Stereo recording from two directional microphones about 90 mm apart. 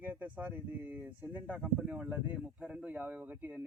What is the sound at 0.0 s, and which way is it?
Speech, 20° right (ahead or behind).